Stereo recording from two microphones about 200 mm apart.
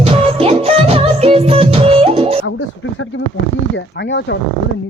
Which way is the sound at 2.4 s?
70° left (ahead or behind).